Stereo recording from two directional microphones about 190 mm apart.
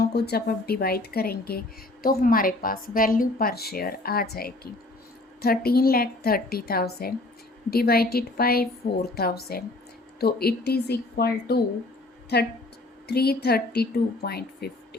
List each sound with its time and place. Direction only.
0.0 s a woman's voice: 55° left (ahead or behind)